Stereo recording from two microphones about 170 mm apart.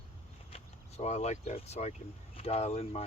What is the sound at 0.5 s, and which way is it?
Speech, 40° left (ahead or behind).